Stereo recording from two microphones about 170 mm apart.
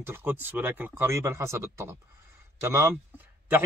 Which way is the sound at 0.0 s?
15° right (ahead or behind).